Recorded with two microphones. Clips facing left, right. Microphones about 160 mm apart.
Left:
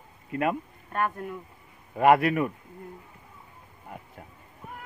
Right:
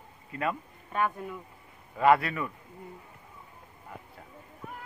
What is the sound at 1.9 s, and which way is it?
Speech, 55° left (ahead or behind).